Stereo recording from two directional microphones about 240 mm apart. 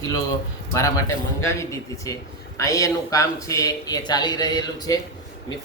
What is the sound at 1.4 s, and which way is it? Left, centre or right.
A man's voice, centre.